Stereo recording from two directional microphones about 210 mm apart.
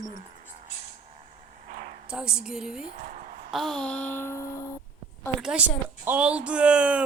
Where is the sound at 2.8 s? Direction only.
35° right (ahead or behind).